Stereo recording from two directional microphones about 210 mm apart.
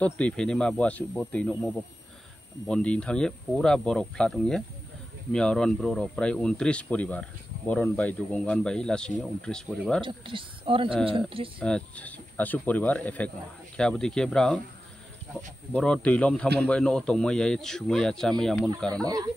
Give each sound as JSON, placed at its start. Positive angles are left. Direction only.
{"t": 0.0, "sound": "speech", "side_deg": 5}
{"t": 10.0, "sound": "a woman's voice", "side_deg": -25}
{"t": 11.6, "sound": "speech", "side_deg": 5}
{"t": 15.7, "sound": "speech", "side_deg": 5}